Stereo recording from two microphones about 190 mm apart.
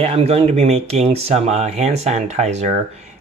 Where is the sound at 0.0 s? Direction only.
30° right (ahead or behind).